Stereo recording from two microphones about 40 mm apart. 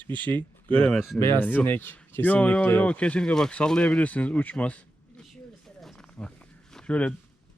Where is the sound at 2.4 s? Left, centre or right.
Left.